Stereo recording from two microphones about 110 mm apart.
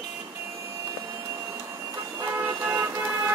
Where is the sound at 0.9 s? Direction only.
25° right (ahead or behind).